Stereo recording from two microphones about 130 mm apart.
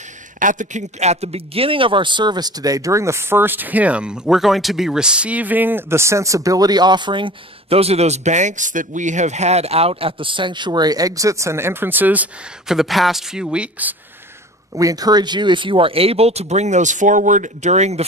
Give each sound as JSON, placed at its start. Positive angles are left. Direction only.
{"t": 0.4, "sound": "a man's voice", "side_deg": -80}
{"t": 14.7, "sound": "speech", "side_deg": -25}